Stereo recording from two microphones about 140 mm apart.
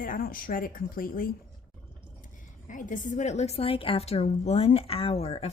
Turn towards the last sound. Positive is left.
turn(degrees=45)  # may be behind; listen again after turning